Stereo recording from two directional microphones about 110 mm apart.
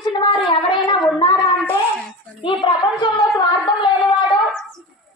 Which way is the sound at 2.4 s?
55° left (ahead or behind).